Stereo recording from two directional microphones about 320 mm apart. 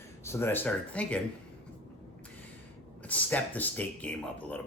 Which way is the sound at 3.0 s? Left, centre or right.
Centre.